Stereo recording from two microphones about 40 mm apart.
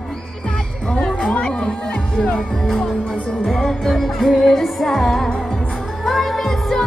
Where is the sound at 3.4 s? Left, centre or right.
Centre.